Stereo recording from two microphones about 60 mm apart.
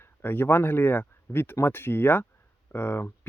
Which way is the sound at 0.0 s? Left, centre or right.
Left.